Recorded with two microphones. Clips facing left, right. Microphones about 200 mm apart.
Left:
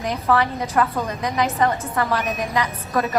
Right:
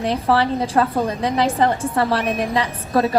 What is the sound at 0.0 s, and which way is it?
A woman's voice, 30° right (ahead or behind).